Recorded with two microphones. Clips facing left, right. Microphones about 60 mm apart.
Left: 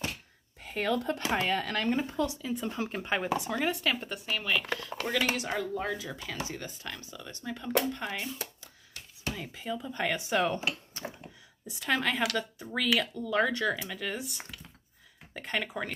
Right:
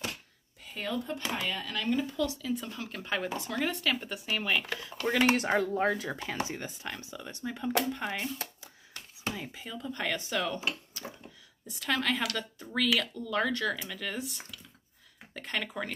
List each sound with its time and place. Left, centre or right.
0.7 s speech: left
1.3 s speech: left
2.2 s speech: left; by 4.2 s centre
4.3 s speech: centre
5.3 s speech: right
6.5 s speech: right
9.3 s speech: centre
9.8 s speech: centre
10.3 s speech: left
11.0 s a sound: left
11.8 s speech: centre